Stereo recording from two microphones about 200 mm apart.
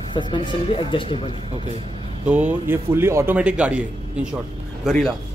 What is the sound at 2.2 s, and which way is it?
A man's voice, 5° right (ahead or behind).